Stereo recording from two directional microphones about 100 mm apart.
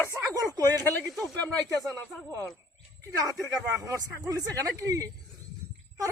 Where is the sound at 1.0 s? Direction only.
Centre (ahead or behind).